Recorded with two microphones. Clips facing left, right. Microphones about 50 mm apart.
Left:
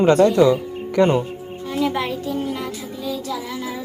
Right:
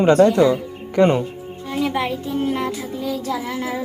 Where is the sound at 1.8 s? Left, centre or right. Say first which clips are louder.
Even; centre.